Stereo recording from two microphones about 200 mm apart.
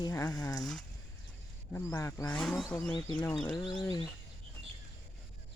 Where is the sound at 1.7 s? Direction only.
15° left (ahead or behind).